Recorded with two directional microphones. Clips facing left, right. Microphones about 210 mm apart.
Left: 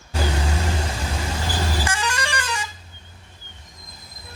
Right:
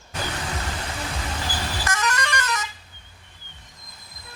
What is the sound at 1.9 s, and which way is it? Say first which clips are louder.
Vehicle horn: even; 30° left (ahead or behind).